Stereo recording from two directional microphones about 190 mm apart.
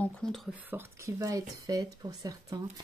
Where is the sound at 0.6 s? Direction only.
15° right (ahead or behind).